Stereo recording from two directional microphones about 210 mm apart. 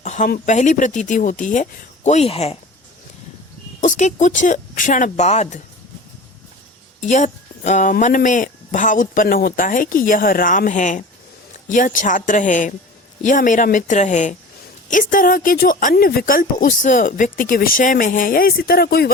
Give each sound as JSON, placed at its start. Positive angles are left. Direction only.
{"t": 0.0, "sound": "speech", "side_deg": 35}
{"t": 3.8, "sound": "speech", "side_deg": 35}
{"t": 7.0, "sound": "speech", "side_deg": 35}